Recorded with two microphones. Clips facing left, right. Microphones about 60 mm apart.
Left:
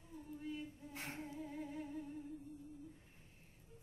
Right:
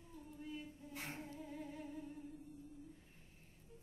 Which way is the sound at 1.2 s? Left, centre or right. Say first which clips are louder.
Left 3 dB; centre.